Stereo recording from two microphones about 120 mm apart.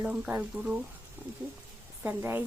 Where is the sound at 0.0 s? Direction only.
15° right (ahead or behind).